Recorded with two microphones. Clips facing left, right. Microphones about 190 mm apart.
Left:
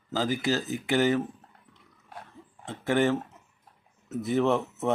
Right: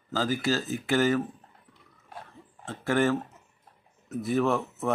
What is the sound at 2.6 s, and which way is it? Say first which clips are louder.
Speech: even; 20° left (ahead or behind).